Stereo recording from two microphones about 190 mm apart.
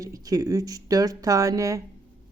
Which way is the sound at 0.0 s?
20° right (ahead or behind).